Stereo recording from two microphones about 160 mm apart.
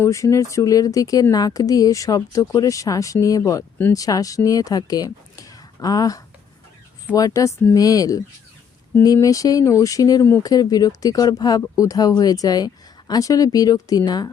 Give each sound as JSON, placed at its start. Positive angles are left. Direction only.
{"t": 0.0, "sound": "speech", "side_deg": 20}